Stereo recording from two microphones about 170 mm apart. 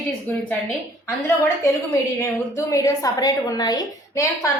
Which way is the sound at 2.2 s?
20° left (ahead or behind).